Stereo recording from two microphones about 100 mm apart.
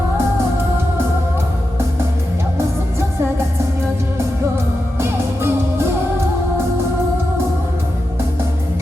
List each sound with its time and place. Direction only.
4.9 s music: 25° right (ahead or behind)